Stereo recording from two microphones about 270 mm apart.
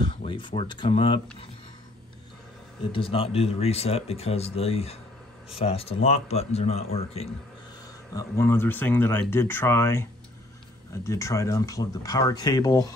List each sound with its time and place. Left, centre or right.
0.0 s speech: centre
2.9 s speech: centre
8.1 s speech: centre
11.1 s speech: centre